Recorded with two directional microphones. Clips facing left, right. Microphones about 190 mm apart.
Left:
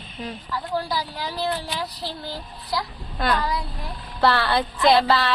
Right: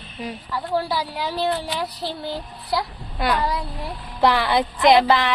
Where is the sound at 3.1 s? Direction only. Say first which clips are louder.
Right 1 dB; 10° right (ahead or behind).